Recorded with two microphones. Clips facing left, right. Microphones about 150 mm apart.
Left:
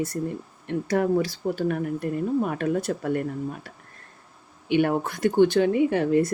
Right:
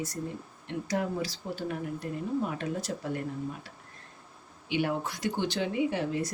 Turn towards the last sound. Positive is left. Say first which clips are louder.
# left 8 dB
turn(degrees=55)  # may be behind; listen again after turning